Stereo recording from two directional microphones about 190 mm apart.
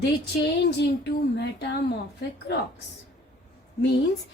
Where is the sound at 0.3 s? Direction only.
60° left (ahead or behind).